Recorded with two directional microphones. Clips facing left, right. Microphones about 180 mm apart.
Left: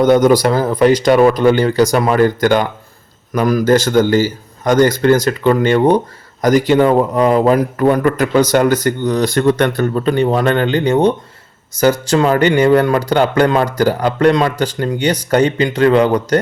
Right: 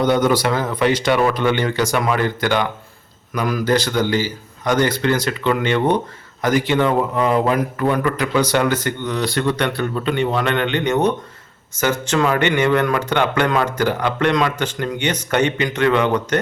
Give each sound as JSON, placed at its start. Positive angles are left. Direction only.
{"t": 0.0, "sound": "a man's voice", "side_deg": 45}